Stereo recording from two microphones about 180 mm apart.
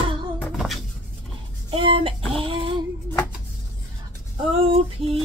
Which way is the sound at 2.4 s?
30° right (ahead or behind).